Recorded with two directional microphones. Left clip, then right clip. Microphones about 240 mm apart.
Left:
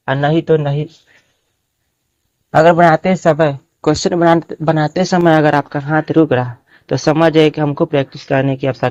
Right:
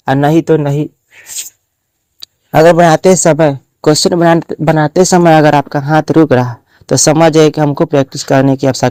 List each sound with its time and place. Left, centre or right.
0.0 s speech: right
2.5 s speech: right